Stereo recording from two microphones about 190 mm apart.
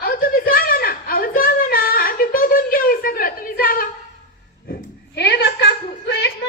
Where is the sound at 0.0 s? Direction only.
50° left (ahead or behind).